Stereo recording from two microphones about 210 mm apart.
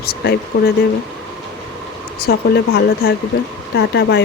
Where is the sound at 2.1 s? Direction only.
50° left (ahead or behind).